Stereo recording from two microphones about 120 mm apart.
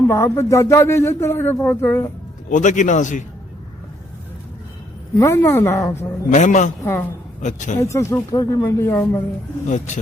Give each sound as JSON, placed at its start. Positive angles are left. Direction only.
{"t": 0.1, "sound": "speech", "side_deg": 20}
{"t": 2.5, "sound": "a man's voice", "side_deg": 90}
{"t": 5.1, "sound": "speech", "side_deg": 25}
{"t": 6.3, "sound": "a man's voice", "side_deg": 90}
{"t": 7.8, "sound": "speech", "side_deg": 25}
{"t": 9.6, "sound": "a man's voice", "side_deg": 90}